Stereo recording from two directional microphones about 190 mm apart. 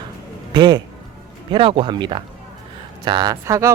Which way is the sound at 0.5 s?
25° right (ahead or behind).